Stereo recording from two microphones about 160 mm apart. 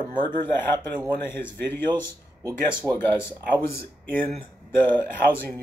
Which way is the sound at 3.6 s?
15° left (ahead or behind).